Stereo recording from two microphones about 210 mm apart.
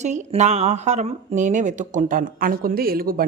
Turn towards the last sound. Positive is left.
turn(degrees=-45)  # may be behind; listen again after turning